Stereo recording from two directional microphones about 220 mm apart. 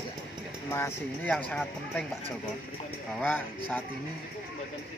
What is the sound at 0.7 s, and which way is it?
Speech, 10° left (ahead or behind).